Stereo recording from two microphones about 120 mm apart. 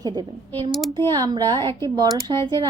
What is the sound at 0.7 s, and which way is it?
Speech, centre (ahead or behind).